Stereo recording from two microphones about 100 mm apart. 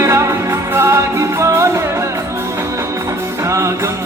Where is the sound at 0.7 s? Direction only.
25° right (ahead or behind).